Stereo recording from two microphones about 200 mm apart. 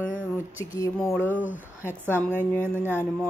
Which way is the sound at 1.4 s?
10° right (ahead or behind).